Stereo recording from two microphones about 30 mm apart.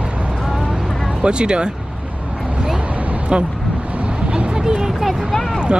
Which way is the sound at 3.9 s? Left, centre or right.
Right.